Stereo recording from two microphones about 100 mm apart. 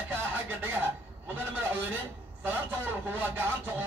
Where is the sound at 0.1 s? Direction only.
20° right (ahead or behind).